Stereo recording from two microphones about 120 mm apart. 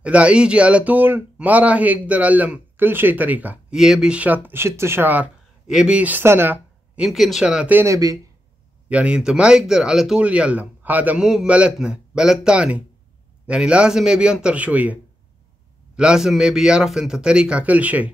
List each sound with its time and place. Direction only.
0.0 s speech: 10° right (ahead or behind)
7.0 s speech: centre (ahead or behind)
7.8 s speech: 25° right (ahead or behind)
8.8 s speech: 10° right (ahead or behind)
16.0 s speech: 5° right (ahead or behind)